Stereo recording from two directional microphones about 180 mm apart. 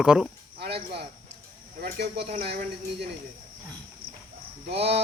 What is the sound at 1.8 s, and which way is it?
Speech, 60° right (ahead or behind).